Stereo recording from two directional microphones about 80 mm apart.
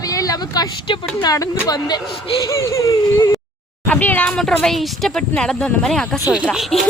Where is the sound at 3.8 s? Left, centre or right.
Left.